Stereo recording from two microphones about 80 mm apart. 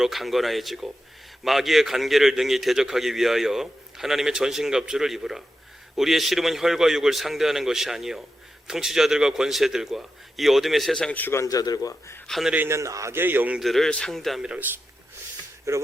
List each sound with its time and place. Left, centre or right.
0.0 s a man's voice: centre
11.4 s speech: left
12.6 s a man's voice: right
13.6 s a man's voice: centre
15.7 s a man's voice: right